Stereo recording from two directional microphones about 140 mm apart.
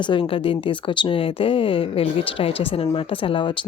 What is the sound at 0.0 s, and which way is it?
Speech, 35° left (ahead or behind).